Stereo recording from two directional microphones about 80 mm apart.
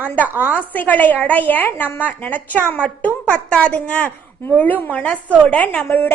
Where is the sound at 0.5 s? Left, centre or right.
Centre.